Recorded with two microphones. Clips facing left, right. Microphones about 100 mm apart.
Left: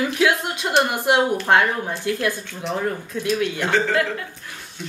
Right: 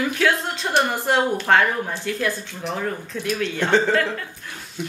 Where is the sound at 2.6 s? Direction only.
5° left (ahead or behind).